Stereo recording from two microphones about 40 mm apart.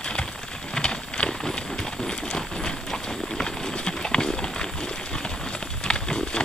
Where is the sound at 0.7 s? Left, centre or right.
Left.